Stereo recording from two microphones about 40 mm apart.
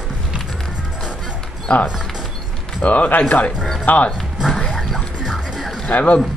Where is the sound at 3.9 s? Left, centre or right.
Left.